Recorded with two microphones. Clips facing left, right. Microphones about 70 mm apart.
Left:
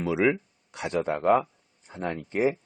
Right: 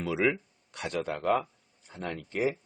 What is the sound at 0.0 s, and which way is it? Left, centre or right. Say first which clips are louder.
Speech: left 4 dB; centre.